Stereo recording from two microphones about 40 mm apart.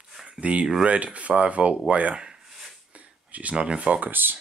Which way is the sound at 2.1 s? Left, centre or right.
Right.